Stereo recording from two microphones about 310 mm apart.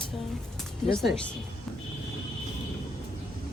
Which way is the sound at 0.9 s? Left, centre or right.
Centre.